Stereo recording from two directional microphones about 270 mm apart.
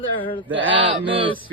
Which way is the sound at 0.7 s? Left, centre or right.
Centre.